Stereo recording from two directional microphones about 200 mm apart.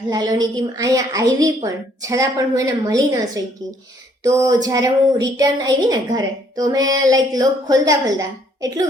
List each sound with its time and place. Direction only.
0.1 s a woman's voice: 20° right (ahead or behind)